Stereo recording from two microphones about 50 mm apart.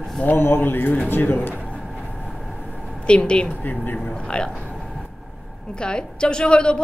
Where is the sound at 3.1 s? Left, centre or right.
Centre.